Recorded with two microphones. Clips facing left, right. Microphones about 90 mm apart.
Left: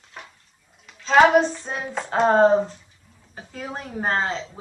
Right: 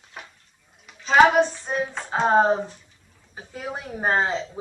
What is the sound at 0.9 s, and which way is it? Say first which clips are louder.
Child singing: left 1 dB; 5° right (ahead or behind).